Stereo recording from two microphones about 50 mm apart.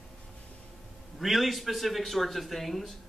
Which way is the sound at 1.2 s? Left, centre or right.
Centre.